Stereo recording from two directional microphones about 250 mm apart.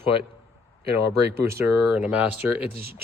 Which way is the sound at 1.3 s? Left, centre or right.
Centre.